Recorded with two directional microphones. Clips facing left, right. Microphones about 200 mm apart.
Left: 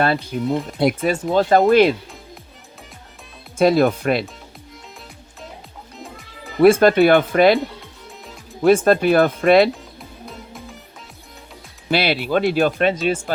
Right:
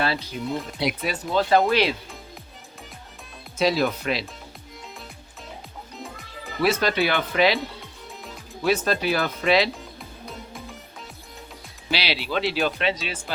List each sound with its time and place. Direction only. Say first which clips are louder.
0.0 s speech: left 7 dB; 50° left (ahead or behind)
3.6 s speech: left 7 dB; 50° left (ahead or behind)
6.0 s music: left 2 dB; centre (ahead or behind)
6.6 s speech: left 10 dB; 50° left (ahead or behind)
8.6 s speech: left 9 dB; 50° left (ahead or behind)
10.2 s music: left 1 dB; centre (ahead or behind)
11.9 s speech: left 8 dB; 50° left (ahead or behind)